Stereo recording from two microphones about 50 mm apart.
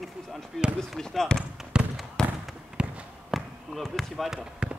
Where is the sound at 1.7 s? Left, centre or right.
Centre.